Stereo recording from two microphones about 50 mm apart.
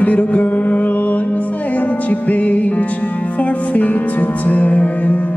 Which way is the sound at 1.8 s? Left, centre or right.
Left.